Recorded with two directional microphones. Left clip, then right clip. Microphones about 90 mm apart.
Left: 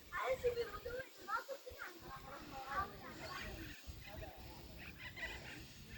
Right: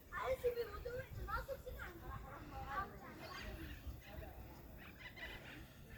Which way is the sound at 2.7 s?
35° right (ahead or behind).